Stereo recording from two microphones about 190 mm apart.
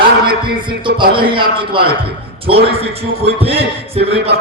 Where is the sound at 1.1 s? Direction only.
25° right (ahead or behind).